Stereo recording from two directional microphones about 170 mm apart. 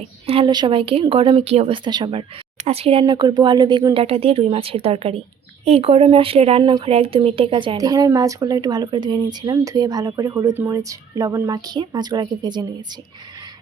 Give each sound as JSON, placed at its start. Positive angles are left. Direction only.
{"t": 0.3, "sound": "speech", "side_deg": -30}